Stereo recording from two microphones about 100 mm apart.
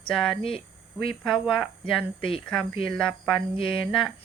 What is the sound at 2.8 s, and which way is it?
Speech, 5° left (ahead or behind).